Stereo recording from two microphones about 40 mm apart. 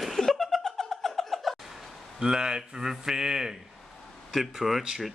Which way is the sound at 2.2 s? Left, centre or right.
Centre.